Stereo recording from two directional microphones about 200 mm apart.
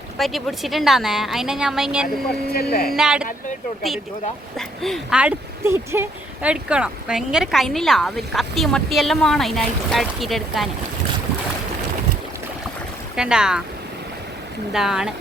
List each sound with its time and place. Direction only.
0.2 s speech: centre (ahead or behind)
2.5 s speech: 50° left (ahead or behind)
2.9 s speech: 5° right (ahead or behind)
4.5 s speech: centre (ahead or behind)
13.1 s speech: 5° right (ahead or behind)
14.7 s speech: 5° right (ahead or behind)